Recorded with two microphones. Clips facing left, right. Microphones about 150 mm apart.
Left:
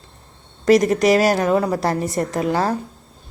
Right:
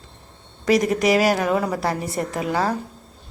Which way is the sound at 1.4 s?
30° left (ahead or behind).